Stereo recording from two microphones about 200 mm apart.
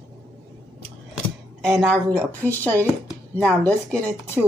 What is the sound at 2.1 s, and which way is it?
A woman's voice, 10° left (ahead or behind).